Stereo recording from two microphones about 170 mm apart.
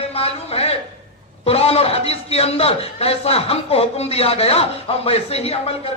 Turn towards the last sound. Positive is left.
turn(degrees=35)  # may be behind; listen again after turning